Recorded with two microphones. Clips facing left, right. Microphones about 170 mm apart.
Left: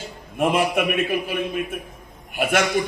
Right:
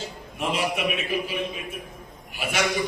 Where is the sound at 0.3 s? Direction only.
55° left (ahead or behind).